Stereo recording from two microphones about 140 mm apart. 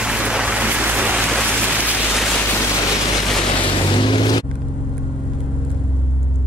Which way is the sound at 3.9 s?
35° left (ahead or behind).